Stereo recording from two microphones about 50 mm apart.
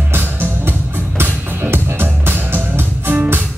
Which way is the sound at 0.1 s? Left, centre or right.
Right.